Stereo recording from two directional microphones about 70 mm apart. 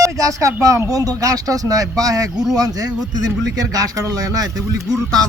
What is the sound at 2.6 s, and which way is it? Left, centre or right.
Speech, right.